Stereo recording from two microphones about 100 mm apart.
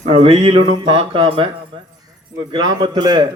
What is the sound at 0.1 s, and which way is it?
Speech, 85° right.